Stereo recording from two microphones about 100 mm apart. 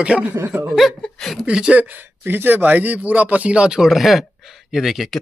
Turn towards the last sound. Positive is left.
turn(degrees=0)  # may be behind; listen again after turning